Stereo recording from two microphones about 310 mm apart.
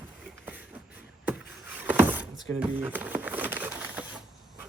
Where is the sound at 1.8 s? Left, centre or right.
Centre.